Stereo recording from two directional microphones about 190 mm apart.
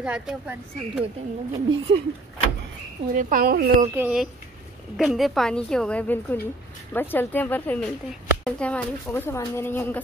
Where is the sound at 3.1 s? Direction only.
50° right (ahead or behind).